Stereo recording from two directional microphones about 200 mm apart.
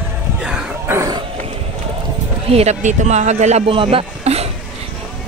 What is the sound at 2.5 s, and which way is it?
Speech, 35° right (ahead or behind).